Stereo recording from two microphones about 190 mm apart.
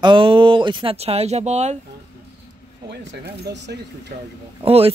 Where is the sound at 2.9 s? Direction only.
65° right (ahead or behind).